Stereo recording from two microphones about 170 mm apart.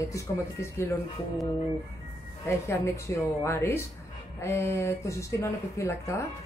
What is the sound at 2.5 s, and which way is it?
A man's voice, 15° left (ahead or behind).